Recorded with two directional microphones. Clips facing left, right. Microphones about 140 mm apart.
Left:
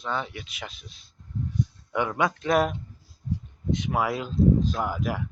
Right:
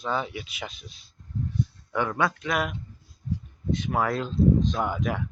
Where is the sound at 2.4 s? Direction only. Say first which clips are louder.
Left 5 dB; 35° left (ahead or behind).